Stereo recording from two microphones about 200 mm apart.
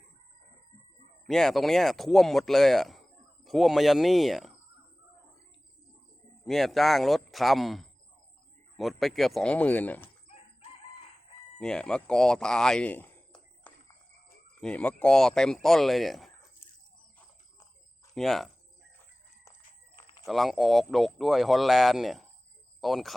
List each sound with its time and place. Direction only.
1.3 s speech: centre (ahead or behind)
6.4 s speech: centre (ahead or behind)
11.6 s speech: 5° left (ahead or behind)
18.1 s speech: centre (ahead or behind)
20.0 s a sound: 25° left (ahead or behind)
20.2 s speech: centre (ahead or behind)